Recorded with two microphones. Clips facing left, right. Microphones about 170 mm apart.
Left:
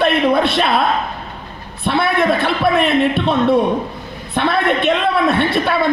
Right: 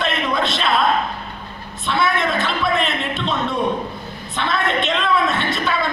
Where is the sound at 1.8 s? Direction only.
60° left (ahead or behind).